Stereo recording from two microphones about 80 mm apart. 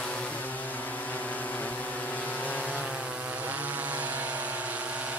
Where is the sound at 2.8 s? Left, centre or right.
Centre.